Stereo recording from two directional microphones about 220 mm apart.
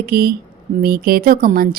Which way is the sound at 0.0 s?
45° right (ahead or behind).